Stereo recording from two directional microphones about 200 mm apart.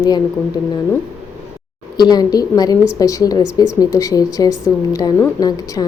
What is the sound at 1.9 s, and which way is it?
A woman's voice, 20° left (ahead or behind).